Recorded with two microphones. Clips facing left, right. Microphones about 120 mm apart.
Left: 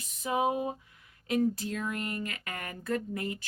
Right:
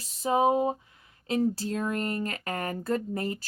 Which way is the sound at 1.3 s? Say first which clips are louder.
Right 2 dB; 30° right (ahead or behind).